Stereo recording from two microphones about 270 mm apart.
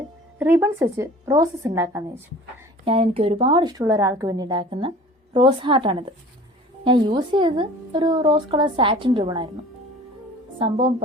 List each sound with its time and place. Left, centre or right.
0.3 s a woman's voice: centre
2.8 s a woman's voice: right